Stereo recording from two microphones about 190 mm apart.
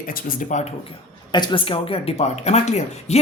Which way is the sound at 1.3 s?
25° left (ahead or behind).